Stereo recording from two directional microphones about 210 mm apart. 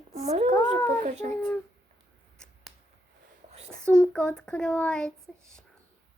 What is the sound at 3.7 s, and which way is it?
Speech, 5° left (ahead or behind).